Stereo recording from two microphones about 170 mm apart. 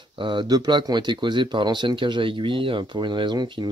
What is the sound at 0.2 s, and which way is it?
Speech, 30° right (ahead or behind).